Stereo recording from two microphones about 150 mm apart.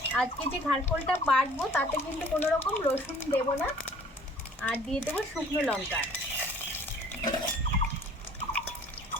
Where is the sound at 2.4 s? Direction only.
15° left (ahead or behind).